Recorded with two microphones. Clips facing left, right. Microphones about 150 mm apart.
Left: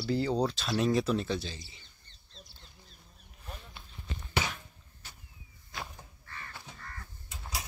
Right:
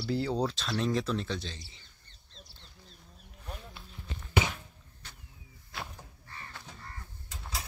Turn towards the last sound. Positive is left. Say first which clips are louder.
# even
turn(degrees=10)  # may be behind; listen again after turning